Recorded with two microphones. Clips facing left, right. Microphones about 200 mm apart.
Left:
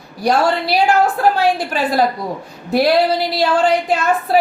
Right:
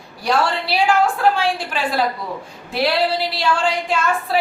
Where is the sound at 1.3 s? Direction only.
40° left (ahead or behind).